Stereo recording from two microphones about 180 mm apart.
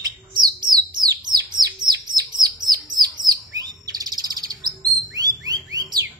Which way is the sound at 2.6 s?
20° right (ahead or behind).